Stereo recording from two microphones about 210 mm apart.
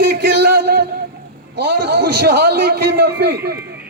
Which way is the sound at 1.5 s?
50° right (ahead or behind).